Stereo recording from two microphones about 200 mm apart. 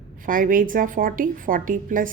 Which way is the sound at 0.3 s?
45° right (ahead or behind).